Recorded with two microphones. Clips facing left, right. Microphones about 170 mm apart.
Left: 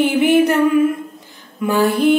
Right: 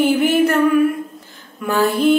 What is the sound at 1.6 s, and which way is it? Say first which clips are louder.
Mantra: left 1 dB; 15° left (ahead or behind).